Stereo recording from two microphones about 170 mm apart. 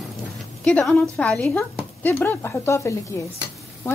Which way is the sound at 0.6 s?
5° left (ahead or behind).